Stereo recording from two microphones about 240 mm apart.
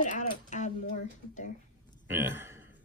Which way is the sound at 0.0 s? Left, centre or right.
Left.